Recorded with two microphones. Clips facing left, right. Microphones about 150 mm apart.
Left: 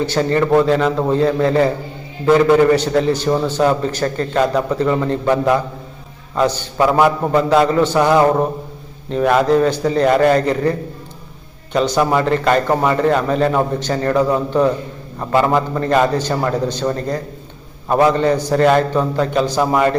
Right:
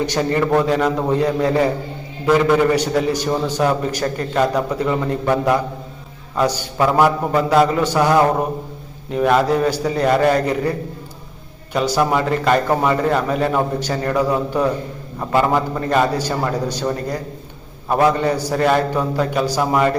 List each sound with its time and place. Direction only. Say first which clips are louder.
0.0 s a man's voice: left 2 dB; 15° right (ahead or behind)
2.7 s a man's voice: left 2 dB; 10° right (ahead or behind)
7.9 s mantra: left 1 dB; 5° right (ahead or behind)
9.0 s a man's voice: left 2 dB; 5° right (ahead or behind)